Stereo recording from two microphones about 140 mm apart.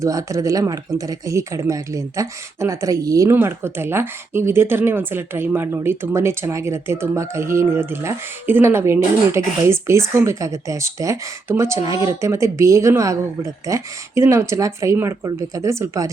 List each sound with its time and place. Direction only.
0.0 s speech: 25° right (ahead or behind)